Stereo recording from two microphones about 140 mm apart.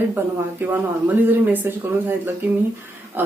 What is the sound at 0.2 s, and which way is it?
Speech, 15° right (ahead or behind).